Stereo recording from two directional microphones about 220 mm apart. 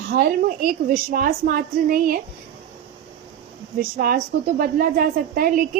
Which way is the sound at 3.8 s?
40° right (ahead or behind).